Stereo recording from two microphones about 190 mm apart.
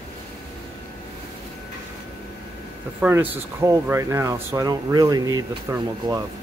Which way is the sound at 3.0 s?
10° right (ahead or behind).